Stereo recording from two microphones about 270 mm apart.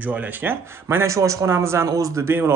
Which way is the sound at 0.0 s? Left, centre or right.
Centre.